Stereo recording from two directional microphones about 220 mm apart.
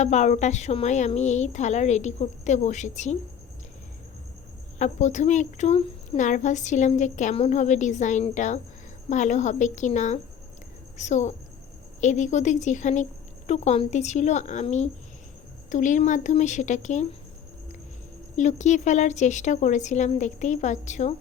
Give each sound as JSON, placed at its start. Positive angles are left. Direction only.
{"t": 0.0, "sound": "a woman's voice", "side_deg": 30}
{"t": 4.8, "sound": "a woman's voice", "side_deg": 35}
{"t": 18.3, "sound": "a woman's voice", "side_deg": 35}